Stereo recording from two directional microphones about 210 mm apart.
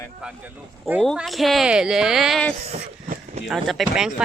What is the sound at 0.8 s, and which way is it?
Speech, centre (ahead or behind).